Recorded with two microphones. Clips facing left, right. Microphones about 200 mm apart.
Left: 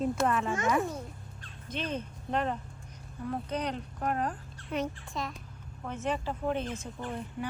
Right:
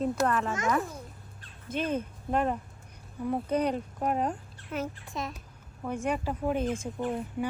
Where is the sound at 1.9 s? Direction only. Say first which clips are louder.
Right 2 dB; 5° right (ahead or behind).